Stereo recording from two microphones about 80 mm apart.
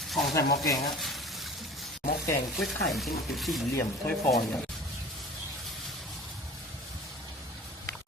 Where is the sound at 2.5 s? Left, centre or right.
Centre.